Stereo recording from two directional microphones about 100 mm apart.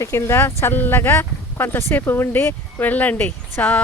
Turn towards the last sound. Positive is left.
turn(degrees=15)  # may be behind; listen again after turning